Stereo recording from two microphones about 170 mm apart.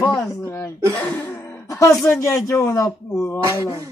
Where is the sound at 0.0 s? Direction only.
20° left (ahead or behind).